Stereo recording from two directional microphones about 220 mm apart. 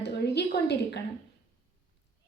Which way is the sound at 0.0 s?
50° left (ahead or behind).